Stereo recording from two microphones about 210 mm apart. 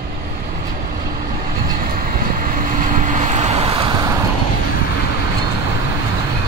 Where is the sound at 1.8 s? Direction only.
40° right (ahead or behind); by 4.0 s 25° right (ahead or behind).